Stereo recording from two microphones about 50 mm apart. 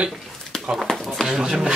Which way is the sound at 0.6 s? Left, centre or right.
Centre.